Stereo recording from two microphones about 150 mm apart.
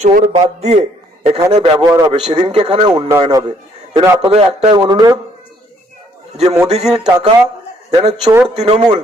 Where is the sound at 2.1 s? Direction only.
35° right (ahead or behind).